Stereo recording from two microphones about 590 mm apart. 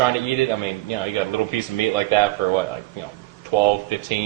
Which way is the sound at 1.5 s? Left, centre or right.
Left.